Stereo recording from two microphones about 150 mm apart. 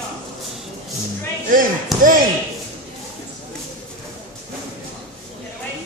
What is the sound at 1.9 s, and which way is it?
Speech, centre (ahead or behind).